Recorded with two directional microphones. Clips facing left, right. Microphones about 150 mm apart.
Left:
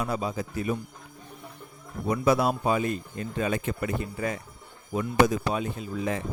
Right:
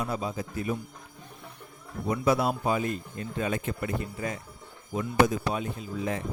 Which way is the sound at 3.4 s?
90° left.